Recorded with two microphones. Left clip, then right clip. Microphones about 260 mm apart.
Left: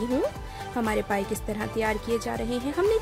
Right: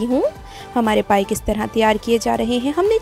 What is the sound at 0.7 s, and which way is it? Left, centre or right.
A woman's voice, right.